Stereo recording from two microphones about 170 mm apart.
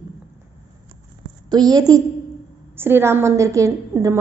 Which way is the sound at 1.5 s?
20° right (ahead or behind).